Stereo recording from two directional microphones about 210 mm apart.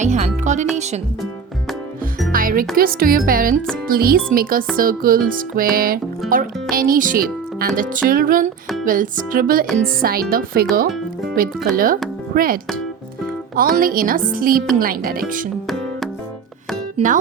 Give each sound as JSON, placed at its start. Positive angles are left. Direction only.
{"t": 0.0, "sound": "music", "side_deg": -35}
{"t": 2.3, "sound": "speech", "side_deg": -40}
{"t": 7.8, "sound": "music", "side_deg": -45}
{"t": 9.7, "sound": "speech", "side_deg": -45}
{"t": 13.6, "sound": "music", "side_deg": -40}
{"t": 14.3, "sound": "speech", "side_deg": -45}
{"t": 17.0, "sound": "music", "side_deg": -30}